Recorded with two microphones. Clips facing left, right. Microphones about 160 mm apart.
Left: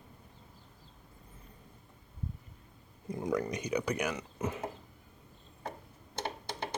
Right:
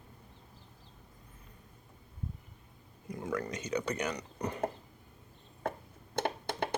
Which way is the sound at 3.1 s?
20° left (ahead or behind).